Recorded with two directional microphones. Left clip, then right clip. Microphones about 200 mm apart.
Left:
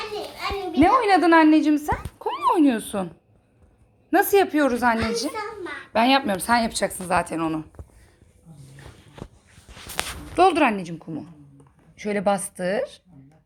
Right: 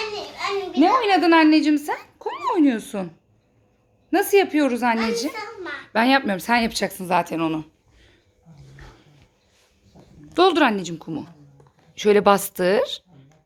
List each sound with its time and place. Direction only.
0.3 s a child's voice: 5° left (ahead or behind)
4.1 s a woman's voice: 10° right (ahead or behind)
10.3 s a woman's voice: 20° right (ahead or behind)